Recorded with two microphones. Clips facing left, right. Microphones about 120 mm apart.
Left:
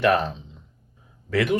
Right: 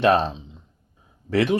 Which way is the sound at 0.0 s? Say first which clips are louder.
Right 2 dB; 25° right (ahead or behind).